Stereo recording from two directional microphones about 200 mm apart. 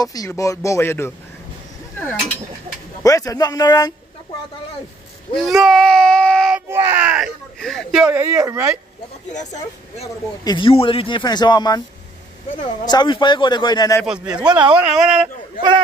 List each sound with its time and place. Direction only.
0.0 s speech: 20° left (ahead or behind)
3.0 s speech: 15° left (ahead or behind)
5.3 s speech: centre (ahead or behind)
6.7 s speech: 10° right (ahead or behind)
9.3 s speech: 35° left (ahead or behind)
10.4 s a man's voice: 25° left (ahead or behind)
12.8 s a man's voice: 20° left (ahead or behind)
14.0 s speech: 5° right (ahead or behind)